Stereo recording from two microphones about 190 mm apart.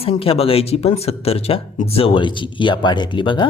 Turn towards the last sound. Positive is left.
turn(degrees=25)  # may be behind; listen again after turning